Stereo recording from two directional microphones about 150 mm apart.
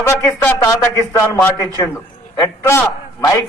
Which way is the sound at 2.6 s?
20° left (ahead or behind).